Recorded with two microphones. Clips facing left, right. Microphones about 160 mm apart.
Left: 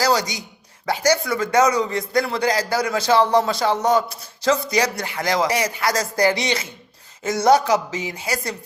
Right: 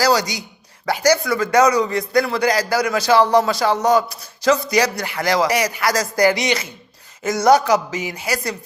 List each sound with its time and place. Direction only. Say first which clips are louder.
0.0 s a man's voice: right 2 dB; 25° left (ahead or behind)